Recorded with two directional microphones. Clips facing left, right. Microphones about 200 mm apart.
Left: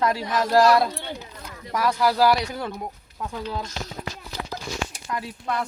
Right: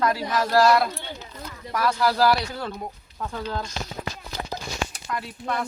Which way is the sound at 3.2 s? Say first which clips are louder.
Even; 5° left (ahead or behind).